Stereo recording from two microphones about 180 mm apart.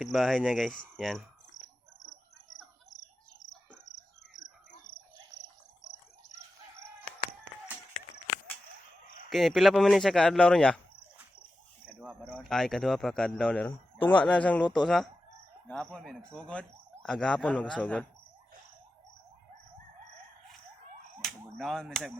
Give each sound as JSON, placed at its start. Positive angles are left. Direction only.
{"t": 0.0, "sound": "speech", "side_deg": 0}
{"t": 4.7, "sound": "cricket", "side_deg": 50}
{"t": 9.3, "sound": "speech", "side_deg": 0}
{"t": 12.2, "sound": "speech", "side_deg": 5}
{"t": 21.2, "sound": "a sound", "side_deg": 0}
{"t": 21.6, "sound": "speech", "side_deg": 0}